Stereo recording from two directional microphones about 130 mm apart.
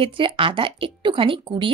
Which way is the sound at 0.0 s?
40° right (ahead or behind).